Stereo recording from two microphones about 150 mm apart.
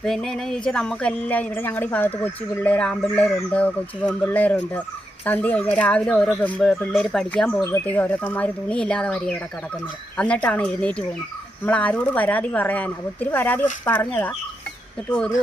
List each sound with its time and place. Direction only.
0.0 s speech: 5° left (ahead or behind)